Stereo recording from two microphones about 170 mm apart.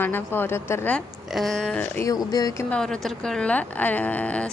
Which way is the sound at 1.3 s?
Centre (ahead or behind).